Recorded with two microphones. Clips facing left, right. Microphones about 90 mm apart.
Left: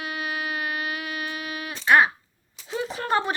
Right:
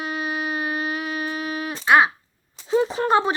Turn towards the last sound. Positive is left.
turn(degrees=-20)  # may be behind; listen again after turning